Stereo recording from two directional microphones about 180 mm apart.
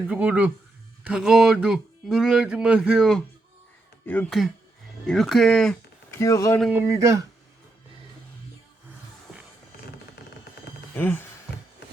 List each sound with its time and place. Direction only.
0.1 s speech: 10° right (ahead or behind)
6.1 s speech: 15° left (ahead or behind)
6.6 s speech: 10° right (ahead or behind)
10.9 s speech: 10° left (ahead or behind)